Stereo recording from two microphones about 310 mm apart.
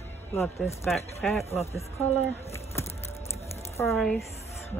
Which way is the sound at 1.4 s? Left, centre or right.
Centre.